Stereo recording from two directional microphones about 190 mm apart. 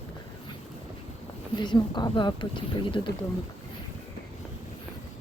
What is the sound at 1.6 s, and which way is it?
Speech, 25° left (ahead or behind).